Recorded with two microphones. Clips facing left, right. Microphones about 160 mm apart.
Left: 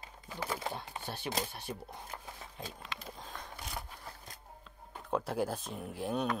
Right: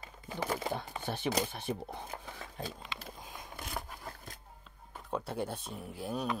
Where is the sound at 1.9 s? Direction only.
65° right (ahead or behind).